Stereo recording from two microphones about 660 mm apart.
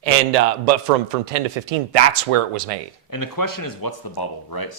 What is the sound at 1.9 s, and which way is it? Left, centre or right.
Speech, right.